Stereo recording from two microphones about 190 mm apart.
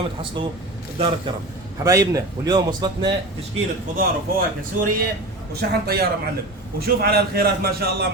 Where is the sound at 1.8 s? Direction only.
15° right (ahead or behind).